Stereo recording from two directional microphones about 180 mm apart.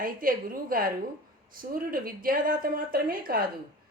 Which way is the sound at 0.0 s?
50° right (ahead or behind).